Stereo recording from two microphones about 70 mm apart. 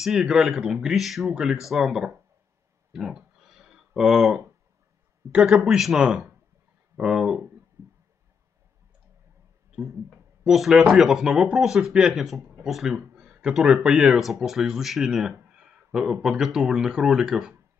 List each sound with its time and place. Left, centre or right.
0.0 s speech: centre
2.9 s a sound: centre
5.3 s speech: centre
7.8 s a sound: right
10.4 s speech: centre
14.1 s speech: centre